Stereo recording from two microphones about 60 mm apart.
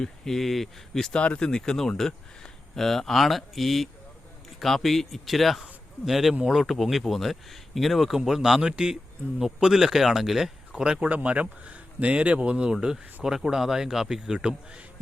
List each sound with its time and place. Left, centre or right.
0.0 s speech: centre
1.2 s speech: centre